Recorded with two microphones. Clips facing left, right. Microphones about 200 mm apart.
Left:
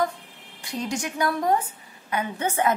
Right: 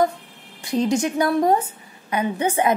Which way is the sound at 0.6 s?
25° right (ahead or behind).